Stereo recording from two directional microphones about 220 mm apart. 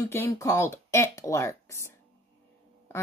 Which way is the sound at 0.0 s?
15° left (ahead or behind).